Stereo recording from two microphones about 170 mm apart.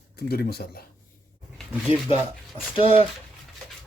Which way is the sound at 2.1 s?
35° left (ahead or behind).